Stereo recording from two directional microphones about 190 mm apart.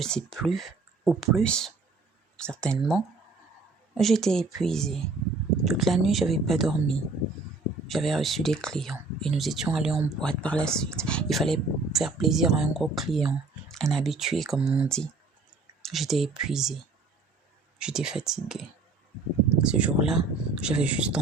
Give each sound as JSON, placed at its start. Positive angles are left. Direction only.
{"t": 0.0, "sound": "speech", "side_deg": 5}
{"t": 17.7, "sound": "speech", "side_deg": -5}
{"t": 19.6, "sound": "speech", "side_deg": -5}